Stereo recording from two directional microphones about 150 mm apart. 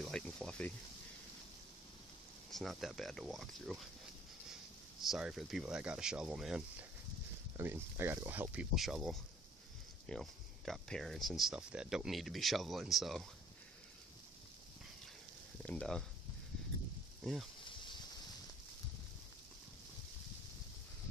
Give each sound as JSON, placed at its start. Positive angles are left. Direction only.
{"t": 0.0, "sound": "speech", "side_deg": 5}
{"t": 2.5, "sound": "speech", "side_deg": 0}
{"t": 5.0, "sound": "speech", "side_deg": 0}
{"t": 7.5, "sound": "speech", "side_deg": -15}
{"t": 15.6, "sound": "speech", "side_deg": 5}
{"t": 17.2, "sound": "speech", "side_deg": 0}
{"t": 17.6, "sound": "a sound", "side_deg": 30}